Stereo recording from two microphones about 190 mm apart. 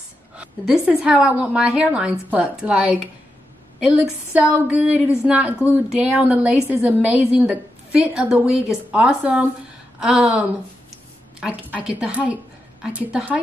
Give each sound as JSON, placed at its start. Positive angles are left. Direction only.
{"t": 0.4, "sound": "a woman's voice", "side_deg": -5}